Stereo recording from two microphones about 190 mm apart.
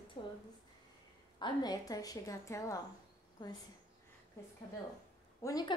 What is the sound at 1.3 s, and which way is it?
A woman's voice, 20° left (ahead or behind).